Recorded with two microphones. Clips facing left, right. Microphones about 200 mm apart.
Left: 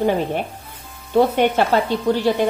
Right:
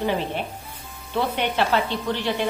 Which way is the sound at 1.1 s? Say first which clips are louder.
Left 9 dB; 45° left (ahead or behind).